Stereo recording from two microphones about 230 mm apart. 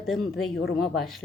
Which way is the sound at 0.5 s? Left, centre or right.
Left.